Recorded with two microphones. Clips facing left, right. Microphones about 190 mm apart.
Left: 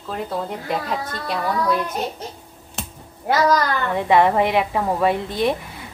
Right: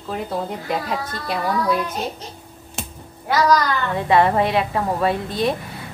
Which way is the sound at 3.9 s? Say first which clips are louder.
Left 1 dB; 15° left (ahead or behind).